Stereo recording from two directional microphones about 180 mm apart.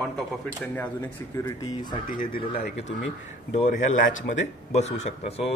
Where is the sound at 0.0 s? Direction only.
5° left (ahead or behind).